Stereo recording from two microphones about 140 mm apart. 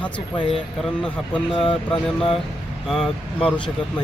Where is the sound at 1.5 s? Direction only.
40° left (ahead or behind).